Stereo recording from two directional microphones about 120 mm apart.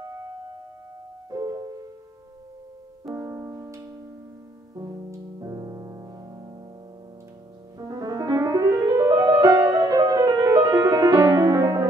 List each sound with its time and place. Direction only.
1.3 s music: 35° right (ahead or behind)
3.2 s music: 25° right (ahead or behind)
4.7 s piano: 30° right (ahead or behind)
7.8 s music: 30° right (ahead or behind)